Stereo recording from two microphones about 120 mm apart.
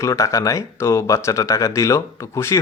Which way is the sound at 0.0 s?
25° left (ahead or behind).